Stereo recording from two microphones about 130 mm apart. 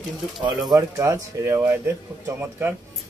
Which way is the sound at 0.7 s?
25° right (ahead or behind).